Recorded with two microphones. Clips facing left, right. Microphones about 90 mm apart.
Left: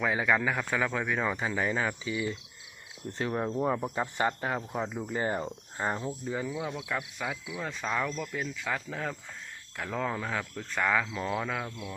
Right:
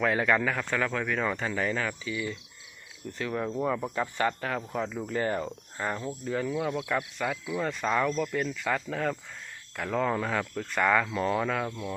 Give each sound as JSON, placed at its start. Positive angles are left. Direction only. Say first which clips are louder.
{"t": 0.0, "sound": "a man's voice", "louder": "right 2 dB", "side_deg": 10}